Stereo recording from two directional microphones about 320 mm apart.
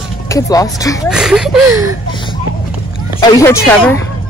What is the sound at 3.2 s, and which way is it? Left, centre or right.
Speech, centre.